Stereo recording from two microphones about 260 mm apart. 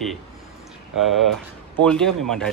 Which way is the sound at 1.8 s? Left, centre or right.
Centre.